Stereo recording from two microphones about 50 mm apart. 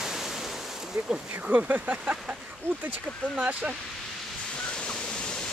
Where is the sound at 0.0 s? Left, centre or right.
Centre.